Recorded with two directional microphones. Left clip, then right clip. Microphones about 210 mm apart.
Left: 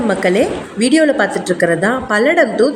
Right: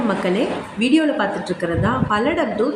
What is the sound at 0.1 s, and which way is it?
A woman's voice, 30° left (ahead or behind).